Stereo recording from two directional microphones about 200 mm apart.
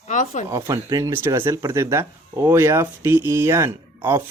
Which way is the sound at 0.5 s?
15° right (ahead or behind).